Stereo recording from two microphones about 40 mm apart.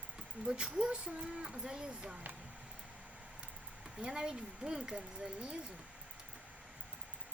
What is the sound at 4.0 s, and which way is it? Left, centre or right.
Speech, centre.